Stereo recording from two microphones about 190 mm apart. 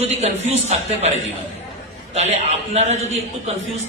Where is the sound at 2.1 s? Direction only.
35° right (ahead or behind).